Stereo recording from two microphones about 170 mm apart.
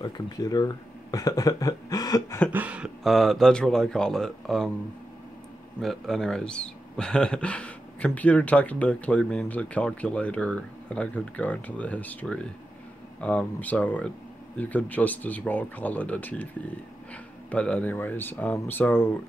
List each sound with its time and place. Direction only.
0.0 s speech: 25° left (ahead or behind)
2.5 s speech: 10° right (ahead or behind)
5.8 s speech: centre (ahead or behind)